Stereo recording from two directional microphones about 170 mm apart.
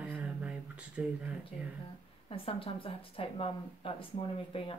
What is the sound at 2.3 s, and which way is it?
Speech, 30° left (ahead or behind).